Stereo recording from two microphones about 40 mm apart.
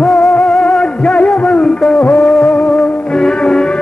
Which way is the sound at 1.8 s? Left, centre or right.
Centre.